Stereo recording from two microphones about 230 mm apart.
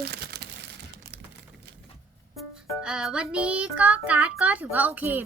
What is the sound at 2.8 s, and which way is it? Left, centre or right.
A child's voice, centre.